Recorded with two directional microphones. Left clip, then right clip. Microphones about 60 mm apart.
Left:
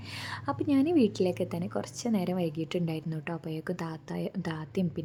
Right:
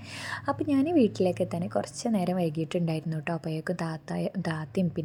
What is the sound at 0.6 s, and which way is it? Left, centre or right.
A woman's voice, right.